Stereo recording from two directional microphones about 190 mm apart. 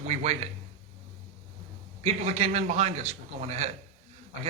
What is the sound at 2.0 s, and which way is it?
Speech, 35° right (ahead or behind).